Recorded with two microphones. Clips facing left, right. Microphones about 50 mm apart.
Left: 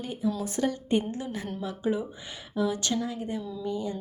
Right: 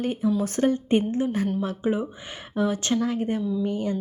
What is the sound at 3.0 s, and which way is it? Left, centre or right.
Speech, right.